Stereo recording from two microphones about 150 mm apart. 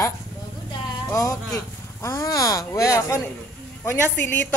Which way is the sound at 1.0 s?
25° left (ahead or behind).